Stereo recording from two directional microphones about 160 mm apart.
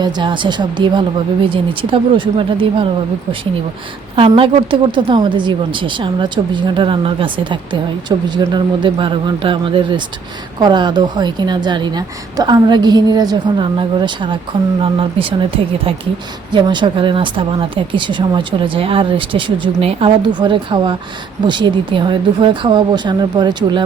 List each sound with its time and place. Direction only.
0.0 s a woman's voice: 30° right (ahead or behind)
4.1 s a woman's voice: 35° right (ahead or behind)